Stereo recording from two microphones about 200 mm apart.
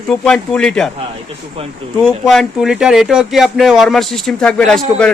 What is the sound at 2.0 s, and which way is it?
Speech, centre (ahead or behind).